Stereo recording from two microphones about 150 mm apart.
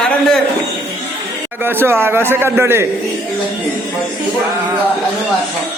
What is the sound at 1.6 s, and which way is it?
A man's voice, 15° right (ahead or behind).